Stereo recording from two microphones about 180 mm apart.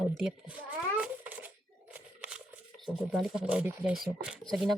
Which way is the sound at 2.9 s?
Centre (ahead or behind).